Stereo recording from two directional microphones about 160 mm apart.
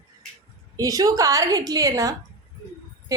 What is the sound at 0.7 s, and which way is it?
A woman's voice, 20° right (ahead or behind).